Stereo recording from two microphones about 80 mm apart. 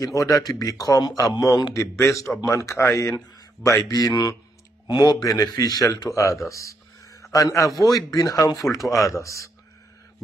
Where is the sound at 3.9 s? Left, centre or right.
Left.